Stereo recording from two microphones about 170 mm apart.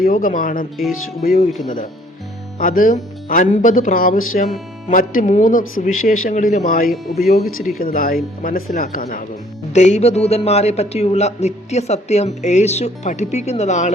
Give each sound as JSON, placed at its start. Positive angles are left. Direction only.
{"t": 0.0, "sound": "speech", "side_deg": 55}
{"t": 2.6, "sound": "speech", "side_deg": 55}
{"t": 5.2, "sound": "speech", "side_deg": 45}
{"t": 9.7, "sound": "a man's voice", "side_deg": 45}